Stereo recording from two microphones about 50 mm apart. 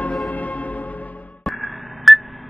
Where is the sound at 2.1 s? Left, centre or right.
Centre.